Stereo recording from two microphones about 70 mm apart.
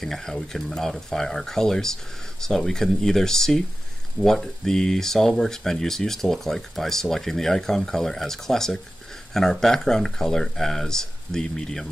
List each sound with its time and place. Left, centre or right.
0.0 s speech: centre